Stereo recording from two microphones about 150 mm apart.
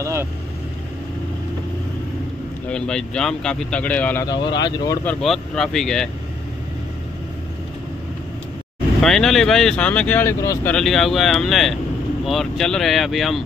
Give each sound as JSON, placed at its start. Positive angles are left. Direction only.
{"t": 0.0, "sound": "vehicle", "side_deg": -20}
{"t": 2.7, "sound": "speech", "side_deg": 5}
{"t": 4.3, "sound": "speech", "side_deg": 30}
{"t": 5.0, "sound": "speech", "side_deg": 0}
{"t": 9.0, "sound": "speech", "side_deg": 5}
{"t": 10.7, "sound": "speech", "side_deg": 5}